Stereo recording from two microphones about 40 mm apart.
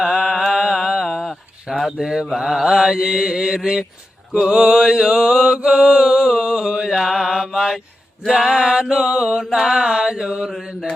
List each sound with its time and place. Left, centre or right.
0.1 s mantra: centre
1.7 s a sound: centre
2.0 s mantra: centre